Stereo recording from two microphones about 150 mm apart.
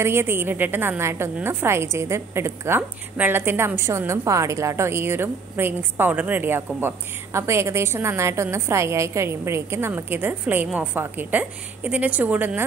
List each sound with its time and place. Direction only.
0.0 s a woman's voice: 15° right (ahead or behind)